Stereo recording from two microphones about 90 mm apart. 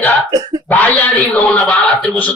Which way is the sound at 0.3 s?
50° right (ahead or behind).